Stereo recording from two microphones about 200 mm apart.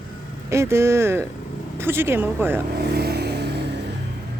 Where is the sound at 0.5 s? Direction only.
15° right (ahead or behind).